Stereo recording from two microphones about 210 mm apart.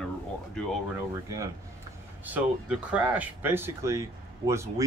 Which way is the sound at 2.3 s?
5° right (ahead or behind).